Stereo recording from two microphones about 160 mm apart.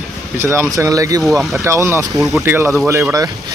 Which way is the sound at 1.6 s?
15° right (ahead or behind).